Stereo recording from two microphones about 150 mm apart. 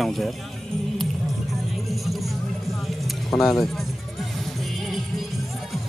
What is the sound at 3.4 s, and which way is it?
Speech, centre (ahead or behind).